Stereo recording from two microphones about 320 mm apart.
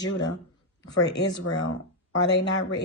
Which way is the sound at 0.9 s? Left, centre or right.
Left.